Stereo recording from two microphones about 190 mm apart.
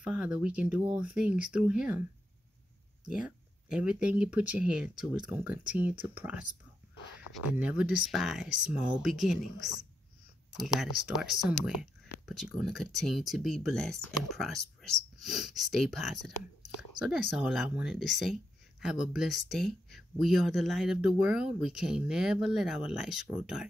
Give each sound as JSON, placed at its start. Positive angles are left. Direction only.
{"t": 0.0, "sound": "speech", "side_deg": -5}
{"t": 3.1, "sound": "speech", "side_deg": -5}
{"t": 7.5, "sound": "speech", "side_deg": -5}
{"t": 10.6, "sound": "speech", "side_deg": 0}